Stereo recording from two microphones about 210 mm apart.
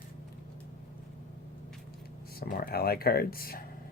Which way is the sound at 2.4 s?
45° left (ahead or behind).